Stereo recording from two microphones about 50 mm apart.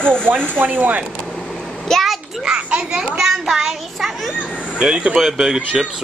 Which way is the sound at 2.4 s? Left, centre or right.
Right.